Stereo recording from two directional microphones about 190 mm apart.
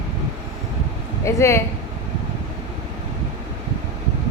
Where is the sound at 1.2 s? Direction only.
15° left (ahead or behind).